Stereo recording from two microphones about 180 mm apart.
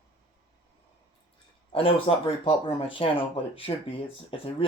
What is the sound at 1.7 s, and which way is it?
Speech, 30° left (ahead or behind).